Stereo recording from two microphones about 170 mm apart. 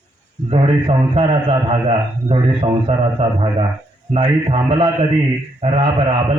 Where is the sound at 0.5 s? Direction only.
35° right (ahead or behind).